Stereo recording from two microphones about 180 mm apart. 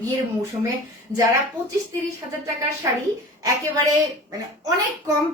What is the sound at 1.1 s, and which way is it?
Speech, 15° right (ahead or behind).